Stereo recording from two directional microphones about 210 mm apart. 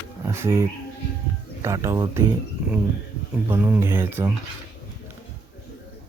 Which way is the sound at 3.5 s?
10° right (ahead or behind).